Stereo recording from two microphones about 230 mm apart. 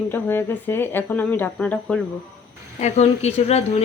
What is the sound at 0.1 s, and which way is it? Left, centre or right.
Speech, centre.